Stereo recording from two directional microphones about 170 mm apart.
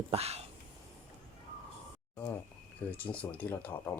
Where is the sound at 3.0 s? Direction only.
10° left (ahead or behind).